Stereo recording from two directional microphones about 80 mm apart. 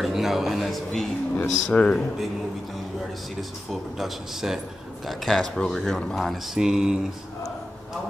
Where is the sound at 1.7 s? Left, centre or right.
Centre.